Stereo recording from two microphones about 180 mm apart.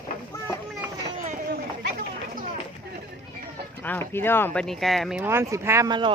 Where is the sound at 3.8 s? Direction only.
10° left (ahead or behind).